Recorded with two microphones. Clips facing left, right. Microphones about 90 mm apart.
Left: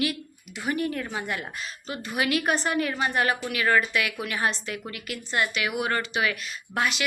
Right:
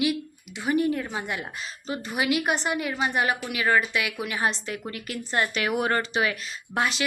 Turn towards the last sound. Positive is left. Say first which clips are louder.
# right 1 dB
turn(degrees=-25)  # may be behind; listen again after turning